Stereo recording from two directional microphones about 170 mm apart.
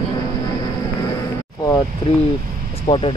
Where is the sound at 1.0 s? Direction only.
20° left (ahead or behind).